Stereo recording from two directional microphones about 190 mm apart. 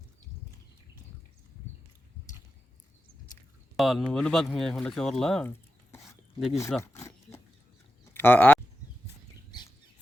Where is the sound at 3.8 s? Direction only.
Centre (ahead or behind).